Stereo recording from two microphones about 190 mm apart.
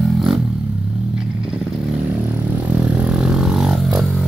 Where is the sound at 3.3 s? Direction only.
5° right (ahead or behind).